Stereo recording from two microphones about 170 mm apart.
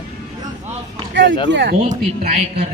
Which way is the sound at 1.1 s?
90° right.